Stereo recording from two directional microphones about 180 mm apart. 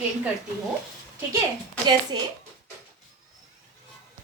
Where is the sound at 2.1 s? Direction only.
25° right (ahead or behind).